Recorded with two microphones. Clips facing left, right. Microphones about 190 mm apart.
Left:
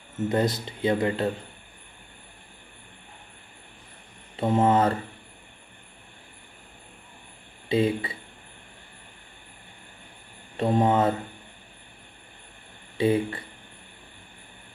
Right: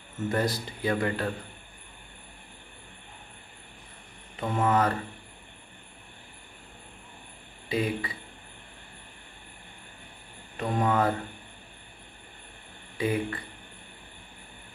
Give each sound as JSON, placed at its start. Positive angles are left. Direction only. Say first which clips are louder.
{"t": 0.3, "sound": "speech", "louder": "left 3 dB", "side_deg": 20}
{"t": 4.4, "sound": "speech", "louder": "left 4 dB", "side_deg": 25}
{"t": 7.6, "sound": "speech", "louder": "left 5 dB", "side_deg": 25}
{"t": 10.6, "sound": "speech", "louder": "left 4 dB", "side_deg": 30}
{"t": 12.9, "sound": "speech", "louder": "left 5 dB", "side_deg": 25}